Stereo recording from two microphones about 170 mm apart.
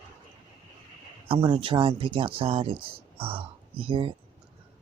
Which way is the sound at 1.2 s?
30° right (ahead or behind).